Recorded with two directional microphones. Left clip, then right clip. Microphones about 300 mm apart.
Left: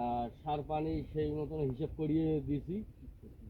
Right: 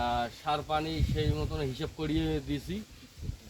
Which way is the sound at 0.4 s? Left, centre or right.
Right.